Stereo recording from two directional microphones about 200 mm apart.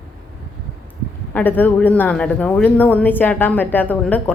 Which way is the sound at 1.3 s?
10° left (ahead or behind).